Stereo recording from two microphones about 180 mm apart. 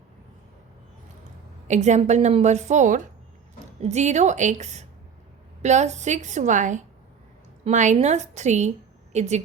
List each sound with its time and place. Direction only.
1.6 s a woman's voice: 40° right (ahead or behind)